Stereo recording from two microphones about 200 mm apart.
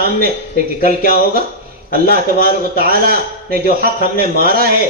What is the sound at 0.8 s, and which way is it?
A man's voice, 50° right (ahead or behind).